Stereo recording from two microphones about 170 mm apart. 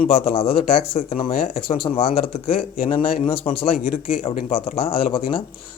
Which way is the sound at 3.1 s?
35° left (ahead or behind).